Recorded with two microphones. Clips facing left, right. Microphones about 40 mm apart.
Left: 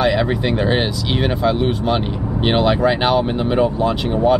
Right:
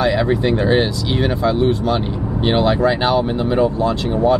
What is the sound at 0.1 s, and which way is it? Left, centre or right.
Speech, centre.